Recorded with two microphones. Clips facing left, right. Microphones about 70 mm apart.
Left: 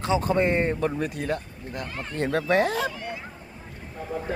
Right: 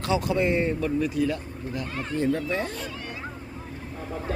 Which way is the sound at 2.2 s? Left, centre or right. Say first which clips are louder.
Left 4 dB; left.